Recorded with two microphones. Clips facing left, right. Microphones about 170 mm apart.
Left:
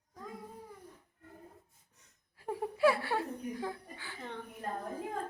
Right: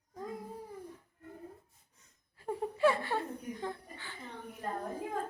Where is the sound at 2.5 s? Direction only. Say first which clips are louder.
Even; 10° left (ahead or behind).